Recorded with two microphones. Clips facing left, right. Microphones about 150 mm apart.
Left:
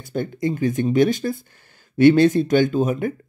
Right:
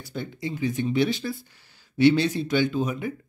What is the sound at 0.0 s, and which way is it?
Speech, 50° left (ahead or behind).